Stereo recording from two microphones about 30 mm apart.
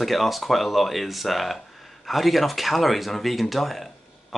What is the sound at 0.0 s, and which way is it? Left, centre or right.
Speech, centre.